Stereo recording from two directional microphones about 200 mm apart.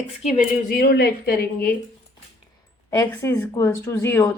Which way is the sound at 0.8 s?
50° left (ahead or behind).